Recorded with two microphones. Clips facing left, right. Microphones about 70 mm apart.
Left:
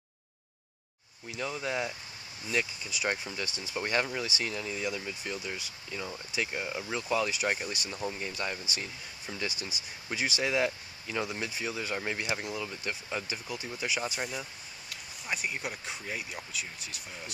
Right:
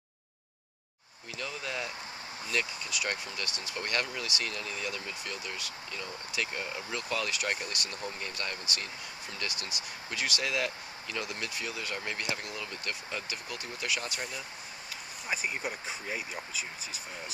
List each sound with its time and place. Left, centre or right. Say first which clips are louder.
1.3 s speech: left 4 dB; centre
15.2 s speech: right 1 dB; centre